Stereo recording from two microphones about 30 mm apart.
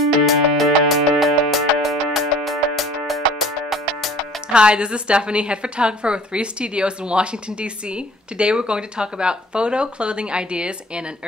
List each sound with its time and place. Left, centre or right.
0.2 s music: centre
4.6 s a woman's voice: right